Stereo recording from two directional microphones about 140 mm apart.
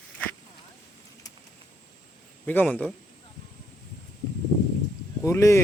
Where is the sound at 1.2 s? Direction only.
25° left (ahead or behind).